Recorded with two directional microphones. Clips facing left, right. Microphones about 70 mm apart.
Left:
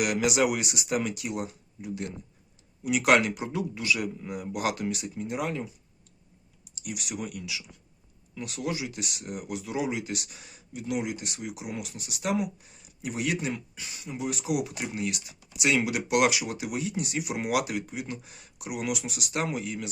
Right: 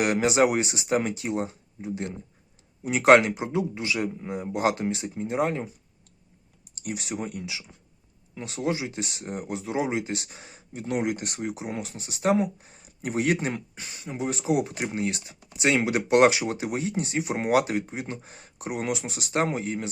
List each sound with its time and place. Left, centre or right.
0.0 s a man's voice: right
6.7 s a sound: right
7.0 s a man's voice: right
11.5 s speech: right